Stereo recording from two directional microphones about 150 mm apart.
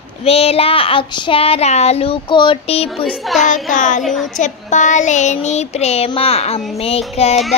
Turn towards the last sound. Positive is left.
turn(degrees=45)  # may be behind; listen again after turning